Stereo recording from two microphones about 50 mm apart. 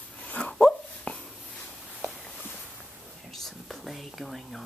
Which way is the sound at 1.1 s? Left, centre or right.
Left.